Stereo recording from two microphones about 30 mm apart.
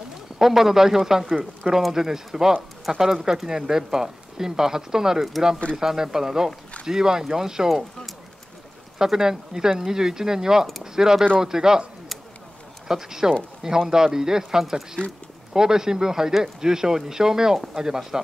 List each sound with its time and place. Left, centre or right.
0.4 s speech: centre
8.9 s speech: centre
12.8 s speech: centre